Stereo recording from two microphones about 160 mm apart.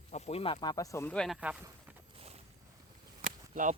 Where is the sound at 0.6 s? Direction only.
20° left (ahead or behind).